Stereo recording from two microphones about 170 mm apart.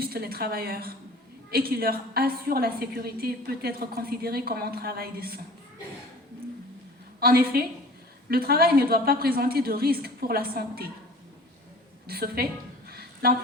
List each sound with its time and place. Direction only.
0.0 s a woman's voice: 65° right (ahead or behind)
7.2 s a woman's voice: 65° right (ahead or behind)
12.0 s a woman's voice: 65° right (ahead or behind)
12.9 s a sound: 65° right (ahead or behind)